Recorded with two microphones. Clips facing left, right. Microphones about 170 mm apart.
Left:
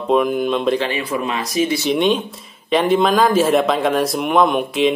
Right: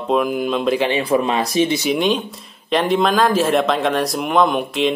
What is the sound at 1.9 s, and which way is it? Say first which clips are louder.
Speech: left 1 dB; centre (ahead or behind).